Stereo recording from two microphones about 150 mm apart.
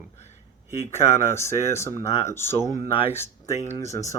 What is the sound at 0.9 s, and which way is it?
Speech, 20° left (ahead or behind).